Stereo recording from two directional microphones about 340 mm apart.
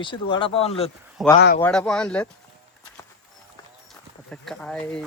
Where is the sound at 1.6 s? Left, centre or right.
Centre.